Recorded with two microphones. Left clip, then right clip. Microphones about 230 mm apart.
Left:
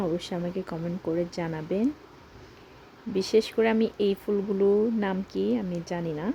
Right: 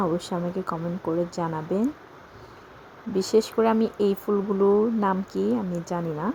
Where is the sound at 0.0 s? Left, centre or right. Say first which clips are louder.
Right 3 dB; centre.